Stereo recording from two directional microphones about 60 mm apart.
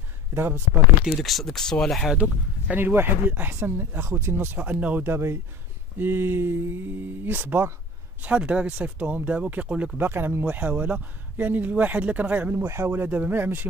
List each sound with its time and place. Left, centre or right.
0.3 s speech: right
1.0 s speech: centre
2.7 s speech: right
5.0 s speech: right
8.2 s speech: right
9.9 s speech: right
12.6 s speech: right